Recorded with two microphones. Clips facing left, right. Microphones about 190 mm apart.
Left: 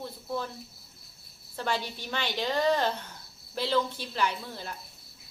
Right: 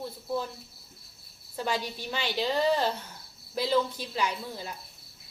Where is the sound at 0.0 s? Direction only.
10° right (ahead or behind).